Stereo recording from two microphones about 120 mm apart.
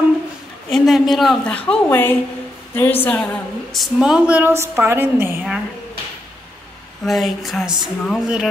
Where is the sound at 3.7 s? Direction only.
Centre (ahead or behind); by 5.4 s 20° right (ahead or behind).